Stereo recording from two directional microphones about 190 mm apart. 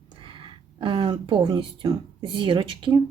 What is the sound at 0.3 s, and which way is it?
Speech, 25° right (ahead or behind).